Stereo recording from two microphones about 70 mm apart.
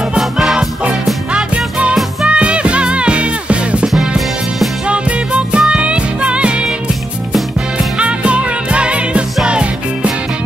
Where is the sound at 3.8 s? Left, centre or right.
Centre.